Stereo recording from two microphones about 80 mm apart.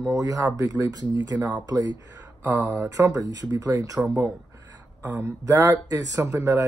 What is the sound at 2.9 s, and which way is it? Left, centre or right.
Speech, right.